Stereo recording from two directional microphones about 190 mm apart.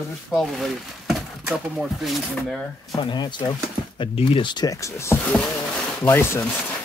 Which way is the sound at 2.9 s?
25° left (ahead or behind).